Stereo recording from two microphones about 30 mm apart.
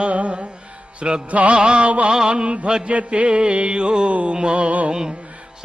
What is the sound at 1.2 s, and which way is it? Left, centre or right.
Mantra, right.